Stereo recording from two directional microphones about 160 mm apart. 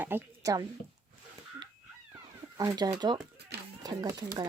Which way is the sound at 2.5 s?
25° right (ahead or behind).